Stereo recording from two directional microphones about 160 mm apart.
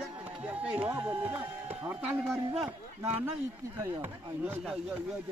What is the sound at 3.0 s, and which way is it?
Speech, 15° right (ahead or behind).